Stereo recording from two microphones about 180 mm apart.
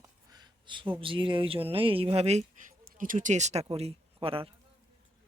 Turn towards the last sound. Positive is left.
turn(degrees=-30)  # may be behind; listen again after turning